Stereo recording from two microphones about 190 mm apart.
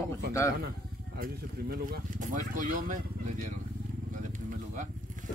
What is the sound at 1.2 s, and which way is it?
Speech, 45° right (ahead or behind).